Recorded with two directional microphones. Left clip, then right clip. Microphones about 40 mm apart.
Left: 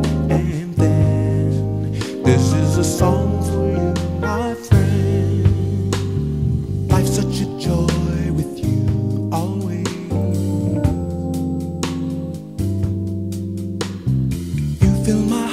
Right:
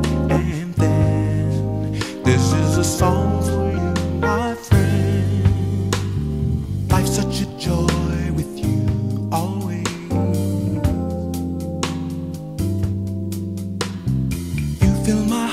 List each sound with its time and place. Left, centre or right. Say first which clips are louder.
0.3 s music: even; right
10.1 s music: right 1 dB; right
14.8 s music: left 1 dB; right